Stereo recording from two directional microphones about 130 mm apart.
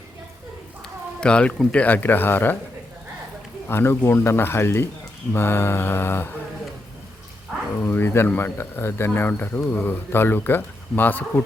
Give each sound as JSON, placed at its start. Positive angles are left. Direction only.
{"t": 1.2, "sound": "speech", "side_deg": 10}
{"t": 3.7, "sound": "speech", "side_deg": 20}
{"t": 7.8, "sound": "speech", "side_deg": 15}